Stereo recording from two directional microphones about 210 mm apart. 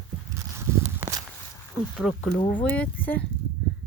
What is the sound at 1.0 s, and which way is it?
Walk, 15° right (ahead or behind).